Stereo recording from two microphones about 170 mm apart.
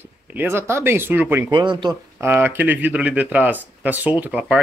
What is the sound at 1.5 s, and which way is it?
Speech, 25° right (ahead or behind).